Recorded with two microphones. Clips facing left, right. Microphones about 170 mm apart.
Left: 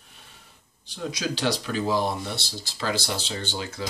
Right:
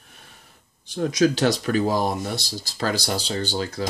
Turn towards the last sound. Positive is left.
turn(degrees=-40)  # may be behind; listen again after turning